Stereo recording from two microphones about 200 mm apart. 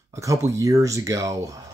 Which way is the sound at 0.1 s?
15° right (ahead or behind).